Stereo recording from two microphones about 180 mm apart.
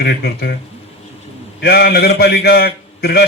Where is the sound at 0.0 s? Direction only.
60° left (ahead or behind).